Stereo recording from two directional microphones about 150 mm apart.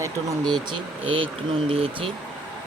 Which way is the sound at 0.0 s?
25° right (ahead or behind).